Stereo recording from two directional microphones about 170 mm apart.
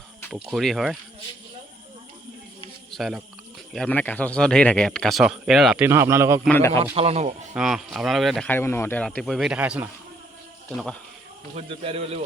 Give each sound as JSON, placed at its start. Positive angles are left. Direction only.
{"t": 0.3, "sound": "speech", "side_deg": -5}
{"t": 2.9, "sound": "speech", "side_deg": 0}
{"t": 6.5, "sound": "a man's voice", "side_deg": 15}
{"t": 6.9, "sound": "speech", "side_deg": -35}
{"t": 7.5, "sound": "speech", "side_deg": -5}
{"t": 8.4, "sound": "speech", "side_deg": 15}
{"t": 11.5, "sound": "speech", "side_deg": -35}